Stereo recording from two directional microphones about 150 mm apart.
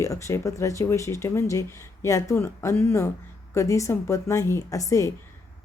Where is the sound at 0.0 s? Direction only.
20° left (ahead or behind).